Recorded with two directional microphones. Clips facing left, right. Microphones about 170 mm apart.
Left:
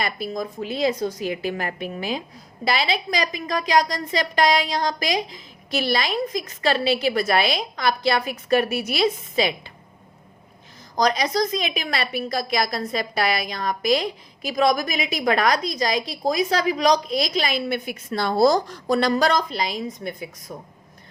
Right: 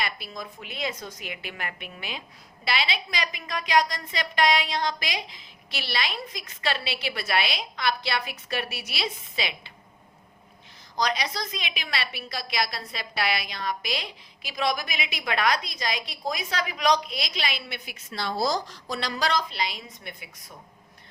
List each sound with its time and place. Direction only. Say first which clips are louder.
0.0 s a woman's voice: left 7 dB; 45° left (ahead or behind)
10.9 s a woman's voice: left 7 dB; 45° left (ahead or behind)